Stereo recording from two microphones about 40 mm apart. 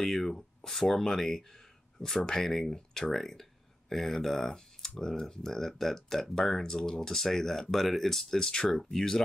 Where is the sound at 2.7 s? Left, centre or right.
Left.